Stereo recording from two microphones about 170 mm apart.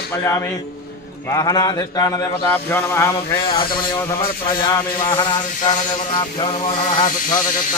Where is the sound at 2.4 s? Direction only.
10° left (ahead or behind).